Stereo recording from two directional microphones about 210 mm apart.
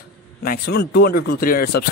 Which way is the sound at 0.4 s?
45° left (ahead or behind).